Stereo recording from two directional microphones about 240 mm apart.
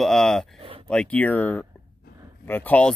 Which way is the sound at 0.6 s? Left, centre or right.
Right.